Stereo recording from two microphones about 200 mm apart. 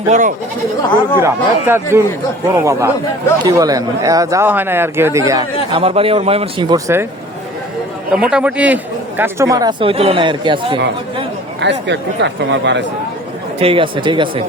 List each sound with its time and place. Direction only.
0.1 s speech: 40° right (ahead or behind)
1.2 s speech: 10° right (ahead or behind)
5.7 s speech: 30° right (ahead or behind); by 7.1 s 15° right (ahead or behind)
8.1 s speech: 5° right (ahead or behind); by 10.8 s 25° right (ahead or behind)
11.6 s speech: 60° right (ahead or behind)
13.6 s speech: 25° right (ahead or behind)